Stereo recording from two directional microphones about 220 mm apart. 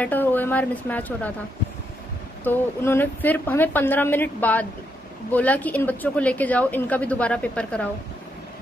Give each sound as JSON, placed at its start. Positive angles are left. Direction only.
{"t": 0.0, "sound": "a woman's voice", "side_deg": 10}
{"t": 2.4, "sound": "a woman's voice", "side_deg": 10}